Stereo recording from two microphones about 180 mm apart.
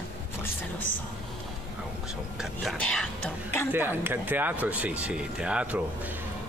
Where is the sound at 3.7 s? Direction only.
10° right (ahead or behind).